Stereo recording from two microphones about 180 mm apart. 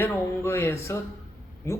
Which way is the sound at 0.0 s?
10° left (ahead or behind).